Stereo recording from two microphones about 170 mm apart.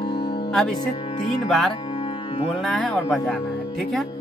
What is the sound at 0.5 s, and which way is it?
Speech, 5° left (ahead or behind).